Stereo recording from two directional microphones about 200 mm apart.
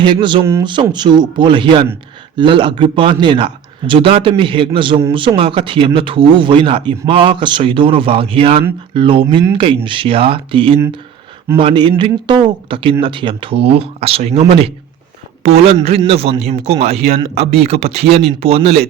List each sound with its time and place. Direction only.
0.0 s a man's voice: 25° right (ahead or behind)